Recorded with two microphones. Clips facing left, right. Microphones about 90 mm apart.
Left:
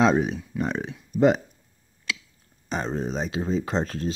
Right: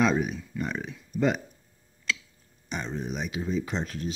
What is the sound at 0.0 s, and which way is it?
Speech, 25° left (ahead or behind).